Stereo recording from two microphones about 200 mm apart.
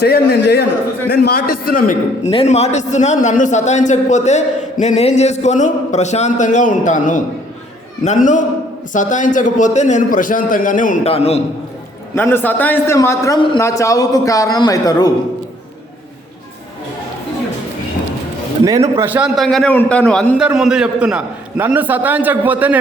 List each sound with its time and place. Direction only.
0.0 s a man's voice: 55° left (ahead or behind)
2.3 s a man's voice: 30° left (ahead or behind)
12.1 s a man's voice: 10° left (ahead or behind)
18.9 s a man's voice: 5° right (ahead or behind)